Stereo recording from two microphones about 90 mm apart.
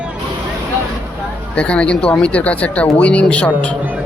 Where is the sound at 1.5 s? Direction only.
15° left (ahead or behind).